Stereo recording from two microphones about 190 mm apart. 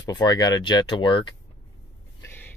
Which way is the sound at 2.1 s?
15° left (ahead or behind).